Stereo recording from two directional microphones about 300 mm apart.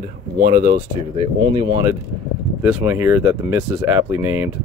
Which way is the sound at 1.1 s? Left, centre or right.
Centre.